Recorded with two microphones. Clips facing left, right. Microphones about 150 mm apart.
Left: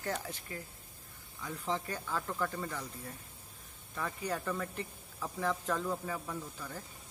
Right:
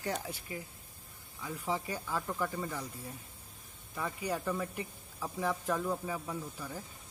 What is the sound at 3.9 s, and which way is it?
Speech, 10° right (ahead or behind).